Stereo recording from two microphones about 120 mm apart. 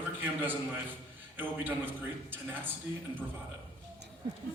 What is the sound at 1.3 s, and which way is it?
A man's voice, 15° right (ahead or behind).